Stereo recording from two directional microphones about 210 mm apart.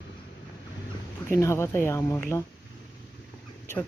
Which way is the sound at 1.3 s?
15° left (ahead or behind).